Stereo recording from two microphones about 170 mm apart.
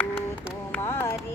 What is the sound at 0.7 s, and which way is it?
Music, 15° left (ahead or behind).